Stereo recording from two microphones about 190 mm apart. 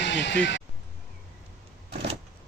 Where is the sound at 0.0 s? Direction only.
65° left (ahead or behind).